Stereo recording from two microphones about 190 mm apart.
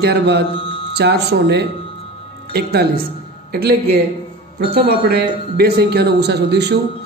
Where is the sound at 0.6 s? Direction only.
30° left (ahead or behind).